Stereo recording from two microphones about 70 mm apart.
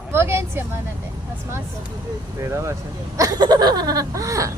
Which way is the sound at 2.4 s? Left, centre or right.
Right.